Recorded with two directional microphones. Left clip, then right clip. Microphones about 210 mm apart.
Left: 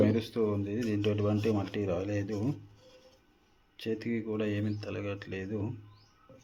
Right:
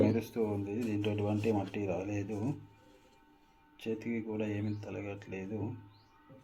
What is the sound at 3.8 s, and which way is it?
Speech, 35° left (ahead or behind).